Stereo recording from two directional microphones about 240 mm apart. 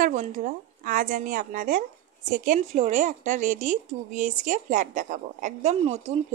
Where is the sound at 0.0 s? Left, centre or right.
Right.